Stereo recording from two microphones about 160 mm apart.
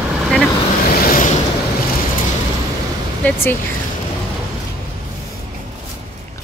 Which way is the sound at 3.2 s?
10° left (ahead or behind).